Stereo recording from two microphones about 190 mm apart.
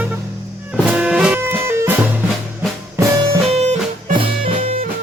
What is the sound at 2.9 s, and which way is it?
Music, 15° right (ahead or behind).